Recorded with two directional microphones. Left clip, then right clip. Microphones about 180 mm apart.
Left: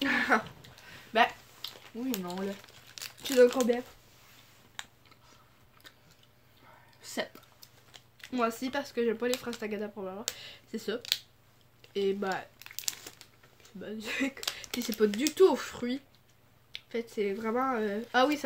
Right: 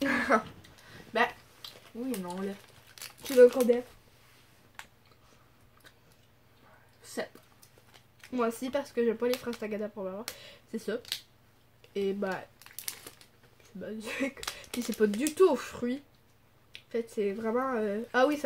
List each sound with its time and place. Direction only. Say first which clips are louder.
0.0 s a sound: even; 15° right (ahead or behind)
1.1 s a sound: left 3 dB; 35° left (ahead or behind)
2.9 s crumpling: even; 10° right (ahead or behind)
8.2 s speech: even; 10° right (ahead or behind)
11.8 s crumpling: left 1 dB; 10° right (ahead or behind)
13.7 s speech: left 1 dB; 10° right (ahead or behind)